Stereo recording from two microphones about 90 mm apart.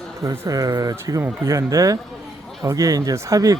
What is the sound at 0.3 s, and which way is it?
Speech, 40° right (ahead or behind).